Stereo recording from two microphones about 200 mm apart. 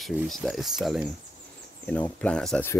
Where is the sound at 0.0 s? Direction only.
Centre (ahead or behind).